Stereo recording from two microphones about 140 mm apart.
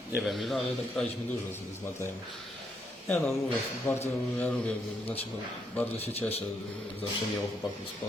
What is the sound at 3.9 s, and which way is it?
Speech, 15° left (ahead or behind).